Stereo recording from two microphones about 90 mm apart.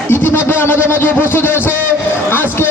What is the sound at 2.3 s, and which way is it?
Music, 25° left (ahead or behind).